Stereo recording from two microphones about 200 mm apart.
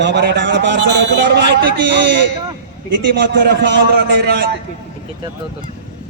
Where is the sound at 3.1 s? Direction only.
60° right (ahead or behind).